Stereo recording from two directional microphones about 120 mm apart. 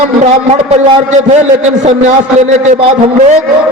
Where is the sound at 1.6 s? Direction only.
70° right (ahead or behind).